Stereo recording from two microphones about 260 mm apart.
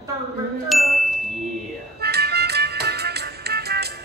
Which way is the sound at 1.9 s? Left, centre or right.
Right.